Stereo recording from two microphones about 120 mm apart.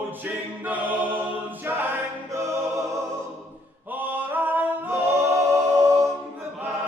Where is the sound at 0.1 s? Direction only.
15° right (ahead or behind).